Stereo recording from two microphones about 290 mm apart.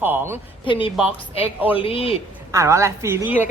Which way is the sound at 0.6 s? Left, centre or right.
Centre.